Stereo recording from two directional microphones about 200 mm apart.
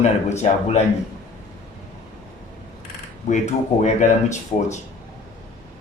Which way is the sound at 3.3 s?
35° left (ahead or behind).